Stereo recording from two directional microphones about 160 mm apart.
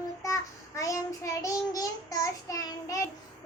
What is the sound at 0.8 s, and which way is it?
Child singing, 20° left (ahead or behind).